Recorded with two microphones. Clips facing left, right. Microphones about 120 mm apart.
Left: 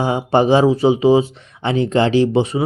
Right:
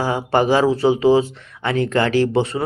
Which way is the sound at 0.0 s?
20° left (ahead or behind).